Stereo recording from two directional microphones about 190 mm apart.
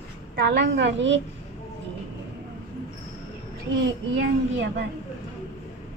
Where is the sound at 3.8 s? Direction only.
70° right (ahead or behind).